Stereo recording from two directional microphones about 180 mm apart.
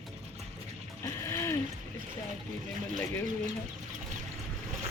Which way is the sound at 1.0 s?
15° left (ahead or behind).